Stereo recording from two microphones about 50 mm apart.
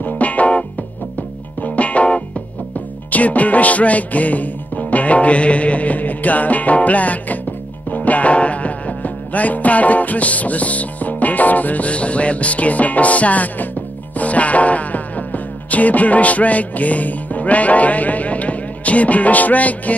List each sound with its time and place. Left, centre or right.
0.0 s music: left